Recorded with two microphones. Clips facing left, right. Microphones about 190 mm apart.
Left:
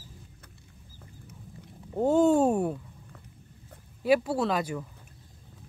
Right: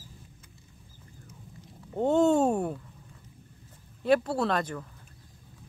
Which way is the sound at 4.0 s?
5° left (ahead or behind).